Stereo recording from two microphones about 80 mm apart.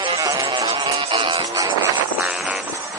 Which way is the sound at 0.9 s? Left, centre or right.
Right.